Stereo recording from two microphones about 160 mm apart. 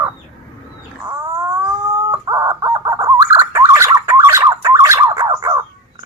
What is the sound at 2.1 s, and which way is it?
Chicken, 20° right (ahead or behind).